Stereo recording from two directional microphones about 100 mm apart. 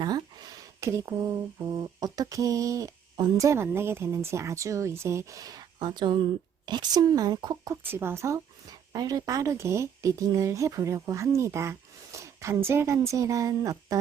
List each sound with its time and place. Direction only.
0.0 s a sound: 40° right (ahead or behind)
0.8 s speech: 30° right (ahead or behind)
7.9 s speech: 25° right (ahead or behind)
8.9 s speech: 40° right (ahead or behind)